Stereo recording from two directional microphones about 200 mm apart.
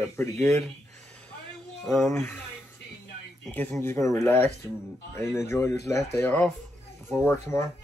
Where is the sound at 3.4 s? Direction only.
5° left (ahead or behind).